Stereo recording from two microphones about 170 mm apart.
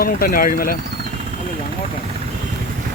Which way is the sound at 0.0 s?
60° left (ahead or behind).